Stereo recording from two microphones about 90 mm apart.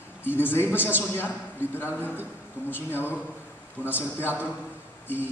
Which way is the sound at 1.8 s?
25° left (ahead or behind).